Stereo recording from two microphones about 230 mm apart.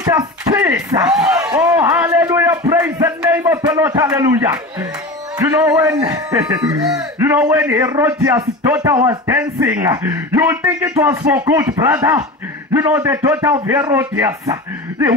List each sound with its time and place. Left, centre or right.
0.0 s a man's voice: centre
2.7 s a sound: centre
3.6 s a man's voice: centre
5.7 s a man's voice: centre